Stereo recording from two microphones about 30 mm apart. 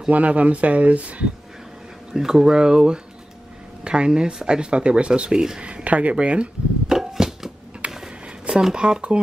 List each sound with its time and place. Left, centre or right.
0.1 s speech: right
2.1 s speech: centre; by 5.4 s right
5.9 s speech: right
6.9 s a sound: centre
8.7 s speech: right